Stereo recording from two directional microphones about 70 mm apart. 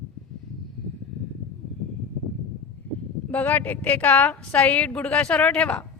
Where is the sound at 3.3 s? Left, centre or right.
Left.